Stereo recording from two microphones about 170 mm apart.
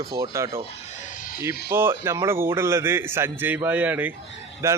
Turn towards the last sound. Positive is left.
turn(degrees=-15)  # may be behind; listen again after turning